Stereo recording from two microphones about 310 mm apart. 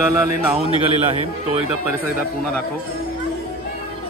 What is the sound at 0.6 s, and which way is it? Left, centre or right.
Speech, centre.